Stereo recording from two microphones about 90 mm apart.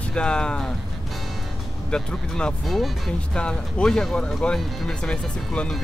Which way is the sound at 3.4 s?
10° left (ahead or behind).